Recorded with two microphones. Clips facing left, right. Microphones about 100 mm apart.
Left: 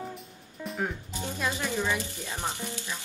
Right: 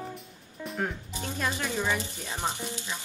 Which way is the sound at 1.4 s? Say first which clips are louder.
Even; 15° right (ahead or behind).